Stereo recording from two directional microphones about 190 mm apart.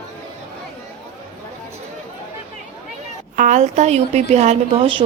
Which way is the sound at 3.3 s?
40° right (ahead or behind).